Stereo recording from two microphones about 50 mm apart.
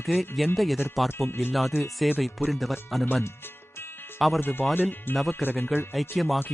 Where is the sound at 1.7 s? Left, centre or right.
Left.